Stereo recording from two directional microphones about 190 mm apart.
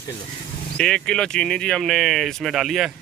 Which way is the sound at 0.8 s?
5° left (ahead or behind).